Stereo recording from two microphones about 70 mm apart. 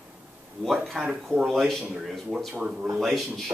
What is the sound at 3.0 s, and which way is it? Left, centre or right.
Speech, centre.